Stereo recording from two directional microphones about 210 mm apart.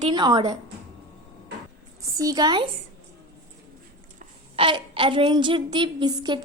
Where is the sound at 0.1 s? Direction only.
20° right (ahead or behind).